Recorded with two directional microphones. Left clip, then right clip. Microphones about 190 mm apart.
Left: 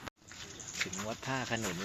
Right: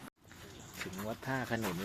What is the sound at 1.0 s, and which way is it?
Speech, centre (ahead or behind).